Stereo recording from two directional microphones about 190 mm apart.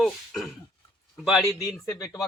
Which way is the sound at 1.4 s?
15° left (ahead or behind).